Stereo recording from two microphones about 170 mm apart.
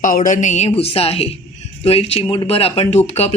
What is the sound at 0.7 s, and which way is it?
Speech, 35° left (ahead or behind).